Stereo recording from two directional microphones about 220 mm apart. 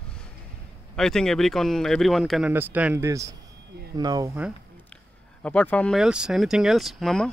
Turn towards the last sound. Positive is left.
turn(degrees=0)  # may be behind; listen again after turning